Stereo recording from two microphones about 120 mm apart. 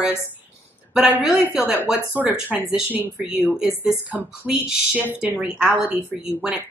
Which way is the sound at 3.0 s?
20° left (ahead or behind).